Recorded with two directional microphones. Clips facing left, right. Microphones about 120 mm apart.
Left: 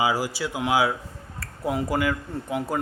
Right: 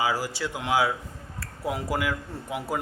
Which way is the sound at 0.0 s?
15° left (ahead or behind).